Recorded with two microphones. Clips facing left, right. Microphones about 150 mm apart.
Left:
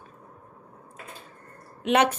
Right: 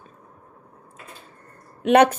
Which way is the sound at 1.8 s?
50° right (ahead or behind).